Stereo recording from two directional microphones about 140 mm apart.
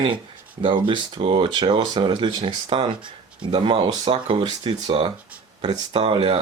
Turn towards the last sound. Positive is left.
turn(degrees=-40)  # may be behind; listen again after turning